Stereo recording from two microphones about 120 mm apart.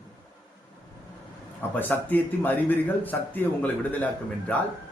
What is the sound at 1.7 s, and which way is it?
A man's voice, 15° left (ahead or behind).